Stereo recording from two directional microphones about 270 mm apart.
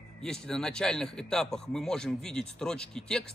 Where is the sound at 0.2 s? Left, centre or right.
Centre.